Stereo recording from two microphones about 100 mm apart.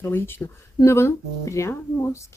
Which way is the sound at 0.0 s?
25° left (ahead or behind).